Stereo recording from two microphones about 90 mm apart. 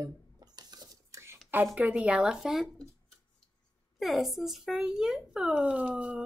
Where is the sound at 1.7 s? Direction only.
15° right (ahead or behind).